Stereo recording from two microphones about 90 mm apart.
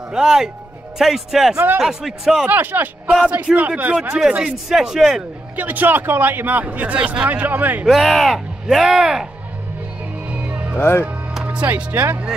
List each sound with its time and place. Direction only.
0.1 s a man's voice: 5° right (ahead or behind)
2.5 s a man's voice: 20° right (ahead or behind); by 5.2 s 5° right (ahead or behind)
5.6 s speech: 20° right (ahead or behind)
7.8 s speech: centre (ahead or behind)
10.2 s music: 15° right (ahead or behind)
10.8 s speech: 25° left (ahead or behind)
11.1 s speech: 15° right (ahead or behind)